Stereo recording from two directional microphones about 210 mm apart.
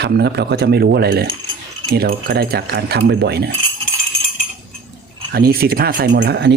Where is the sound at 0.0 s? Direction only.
50° right (ahead or behind).